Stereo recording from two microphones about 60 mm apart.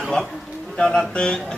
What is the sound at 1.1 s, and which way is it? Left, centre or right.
Speech, centre.